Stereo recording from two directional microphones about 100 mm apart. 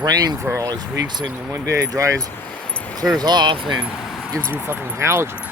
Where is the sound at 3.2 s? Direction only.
45° right (ahead or behind).